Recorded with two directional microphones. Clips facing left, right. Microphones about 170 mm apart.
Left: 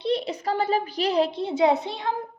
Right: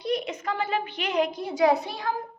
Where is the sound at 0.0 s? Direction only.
30° left (ahead or behind).